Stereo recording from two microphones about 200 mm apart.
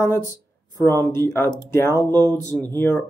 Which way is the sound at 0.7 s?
10° left (ahead or behind).